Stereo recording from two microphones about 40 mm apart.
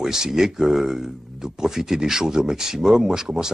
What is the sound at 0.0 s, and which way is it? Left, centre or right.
Speech, centre.